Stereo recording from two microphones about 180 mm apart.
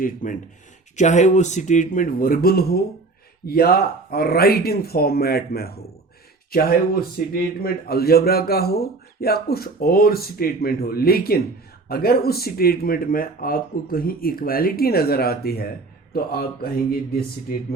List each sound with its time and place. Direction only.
0.0 s speech: 45° left (ahead or behind)